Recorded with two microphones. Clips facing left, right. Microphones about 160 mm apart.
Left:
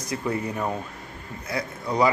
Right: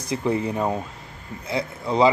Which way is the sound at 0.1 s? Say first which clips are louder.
Right 4 dB; 25° right (ahead or behind).